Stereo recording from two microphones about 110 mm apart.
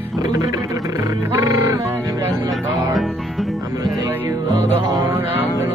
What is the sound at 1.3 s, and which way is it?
Music, 30° right (ahead or behind).